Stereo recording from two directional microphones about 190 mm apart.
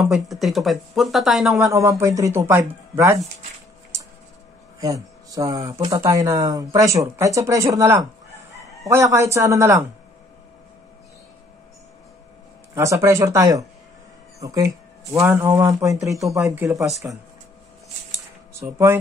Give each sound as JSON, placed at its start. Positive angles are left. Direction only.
{"t": 0.0, "sound": "speech", "side_deg": 0}
{"t": 1.6, "sound": "speech", "side_deg": -15}
{"t": 3.9, "sound": "a sound", "side_deg": -15}
{"t": 5.7, "sound": "speech", "side_deg": -20}
{"t": 12.7, "sound": "speech", "side_deg": -15}
{"t": 16.0, "sound": "speech", "side_deg": 0}
{"t": 16.3, "sound": "speech", "side_deg": -15}
{"t": 18.5, "sound": "speech", "side_deg": -15}